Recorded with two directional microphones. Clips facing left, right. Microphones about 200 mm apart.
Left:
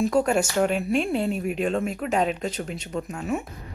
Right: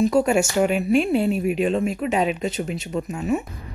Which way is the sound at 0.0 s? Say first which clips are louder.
Right 3 dB; 10° right (ahead or behind).